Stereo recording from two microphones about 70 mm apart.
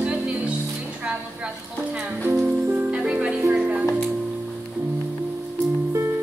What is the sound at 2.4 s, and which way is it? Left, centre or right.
Music, right.